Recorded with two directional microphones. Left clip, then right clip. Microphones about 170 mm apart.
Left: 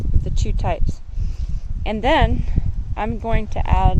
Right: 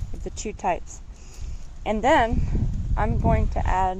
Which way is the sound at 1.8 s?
15° left (ahead or behind).